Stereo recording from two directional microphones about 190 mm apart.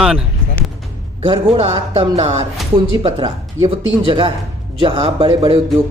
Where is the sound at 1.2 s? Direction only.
35° right (ahead or behind).